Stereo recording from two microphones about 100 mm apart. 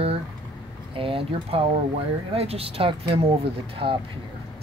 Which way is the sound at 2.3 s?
85° right.